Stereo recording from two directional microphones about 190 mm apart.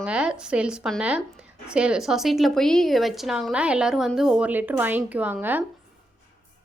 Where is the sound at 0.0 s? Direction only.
5° right (ahead or behind).